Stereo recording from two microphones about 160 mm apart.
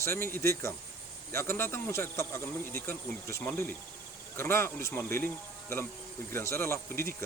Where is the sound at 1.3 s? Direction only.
15° left (ahead or behind).